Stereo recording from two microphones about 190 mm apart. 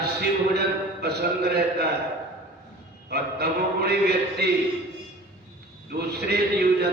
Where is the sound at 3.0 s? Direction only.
55° right (ahead or behind).